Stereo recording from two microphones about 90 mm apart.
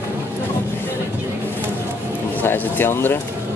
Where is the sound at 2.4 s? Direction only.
25° left (ahead or behind).